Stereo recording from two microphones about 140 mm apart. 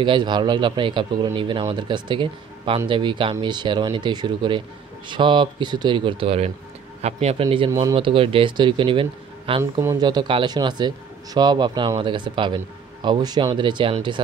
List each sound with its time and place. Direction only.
0.0 s speech: 35° right (ahead or behind)
9.6 s speech: 20° right (ahead or behind)
9.9 s speech: 30° right (ahead or behind)